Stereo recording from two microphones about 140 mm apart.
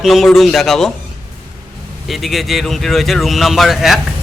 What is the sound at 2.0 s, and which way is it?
Speech, centre (ahead or behind).